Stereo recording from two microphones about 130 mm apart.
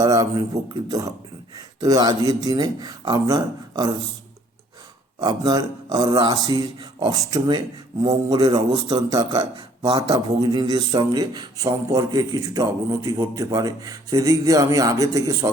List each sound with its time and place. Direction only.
0.0 s a man's voice: 30° right (ahead or behind)
5.2 s a man's voice: 30° right (ahead or behind)
9.0 s a man's voice: 30° right (ahead or behind)